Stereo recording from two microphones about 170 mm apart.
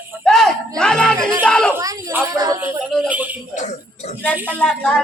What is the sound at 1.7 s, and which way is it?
Speech, 15° right (ahead or behind).